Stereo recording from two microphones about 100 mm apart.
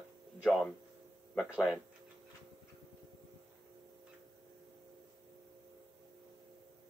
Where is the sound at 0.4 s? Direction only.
Centre (ahead or behind).